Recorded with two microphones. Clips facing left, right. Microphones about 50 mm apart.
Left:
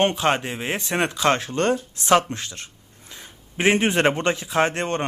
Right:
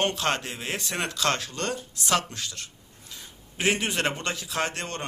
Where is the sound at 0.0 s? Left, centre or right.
Left.